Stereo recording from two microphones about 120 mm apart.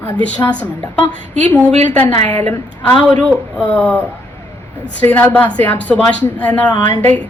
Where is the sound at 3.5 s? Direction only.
10° left (ahead or behind).